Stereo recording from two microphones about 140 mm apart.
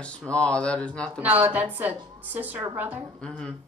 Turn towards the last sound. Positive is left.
turn(degrees=5)  # may be behind; listen again after turning